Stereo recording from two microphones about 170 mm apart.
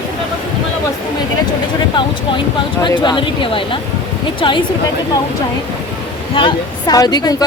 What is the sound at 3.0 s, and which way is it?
Speech, 30° left (ahead or behind).